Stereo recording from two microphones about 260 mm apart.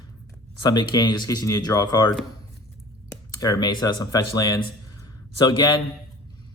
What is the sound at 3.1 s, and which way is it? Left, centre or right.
Speech, centre.